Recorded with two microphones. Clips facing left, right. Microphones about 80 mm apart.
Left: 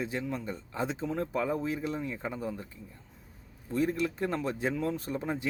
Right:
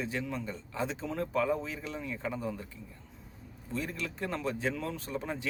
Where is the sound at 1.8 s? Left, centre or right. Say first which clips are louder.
Left 4 dB; left.